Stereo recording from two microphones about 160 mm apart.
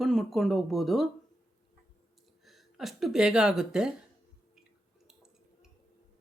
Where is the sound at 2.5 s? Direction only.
Centre (ahead or behind).